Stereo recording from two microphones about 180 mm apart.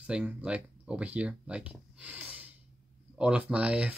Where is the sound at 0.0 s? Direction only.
5° right (ahead or behind).